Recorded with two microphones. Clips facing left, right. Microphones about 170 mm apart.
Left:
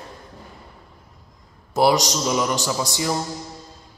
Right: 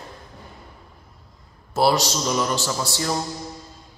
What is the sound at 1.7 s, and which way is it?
Speech, 15° left (ahead or behind).